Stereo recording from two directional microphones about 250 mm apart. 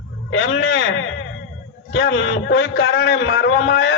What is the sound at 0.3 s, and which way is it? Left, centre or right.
A man's voice, left.